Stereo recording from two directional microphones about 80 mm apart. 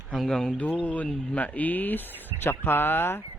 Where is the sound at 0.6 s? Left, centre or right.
Centre.